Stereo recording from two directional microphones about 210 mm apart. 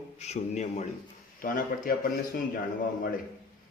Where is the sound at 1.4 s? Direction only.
45° left (ahead or behind).